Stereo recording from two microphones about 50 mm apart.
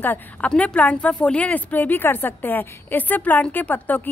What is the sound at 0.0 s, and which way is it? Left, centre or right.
Speech, left.